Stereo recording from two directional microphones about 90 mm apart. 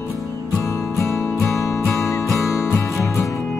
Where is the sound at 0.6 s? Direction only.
30° left (ahead or behind).